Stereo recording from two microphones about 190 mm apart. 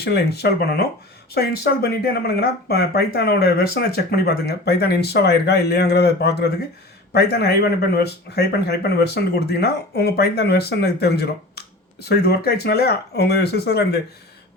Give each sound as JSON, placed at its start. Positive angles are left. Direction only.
{"t": 0.0, "sound": "speech", "side_deg": 60}